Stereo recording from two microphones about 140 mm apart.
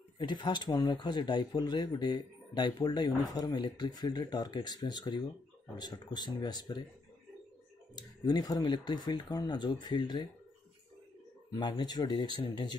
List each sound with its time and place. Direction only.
0.2 s speech: 35° left (ahead or behind)
7.9 s speech: 30° left (ahead or behind)
11.5 s speech: 30° left (ahead or behind)